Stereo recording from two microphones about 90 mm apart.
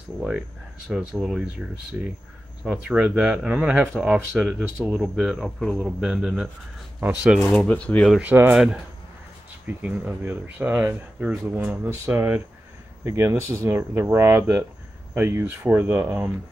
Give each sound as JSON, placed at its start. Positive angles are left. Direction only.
{"t": 0.2, "sound": "speech", "side_deg": -10}
{"t": 7.3, "sound": "speech", "side_deg": 15}
{"t": 8.2, "sound": "speech", "side_deg": -20}
{"t": 9.7, "sound": "speech", "side_deg": -20}